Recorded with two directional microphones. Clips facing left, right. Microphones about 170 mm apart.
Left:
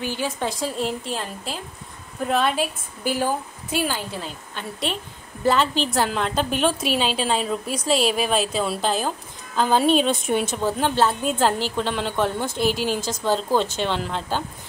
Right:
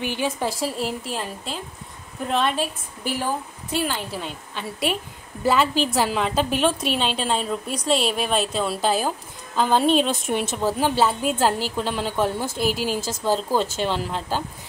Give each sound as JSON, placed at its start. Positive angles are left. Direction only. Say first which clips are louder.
{"t": 0.0, "sound": "a woman's voice", "louder": "right 1 dB", "side_deg": -15}
{"t": 0.5, "sound": "a woman's voice", "louder": "even", "side_deg": -5}